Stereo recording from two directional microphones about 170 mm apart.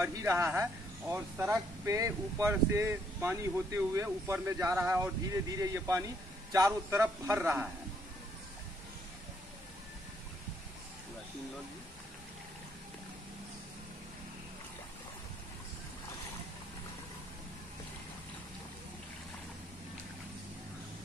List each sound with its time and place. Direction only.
0.0 s speech: 15° right (ahead or behind)